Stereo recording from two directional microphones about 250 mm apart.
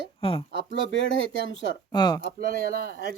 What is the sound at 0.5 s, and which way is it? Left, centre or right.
Speech, left.